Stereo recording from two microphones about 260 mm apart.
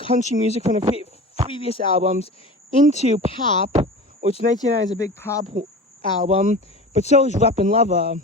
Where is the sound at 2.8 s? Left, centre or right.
Right.